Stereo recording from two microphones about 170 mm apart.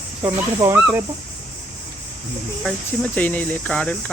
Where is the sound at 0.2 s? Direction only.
15° right (ahead or behind).